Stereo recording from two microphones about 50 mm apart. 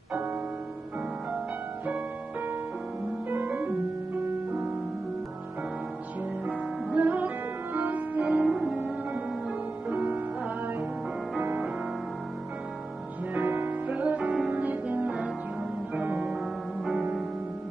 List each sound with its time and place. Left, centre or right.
3.3 s music: right
6.4 s music: right
8.5 s music: centre
8.7 s music: right
9.8 s music: right
13.3 s music: right
13.8 s music: right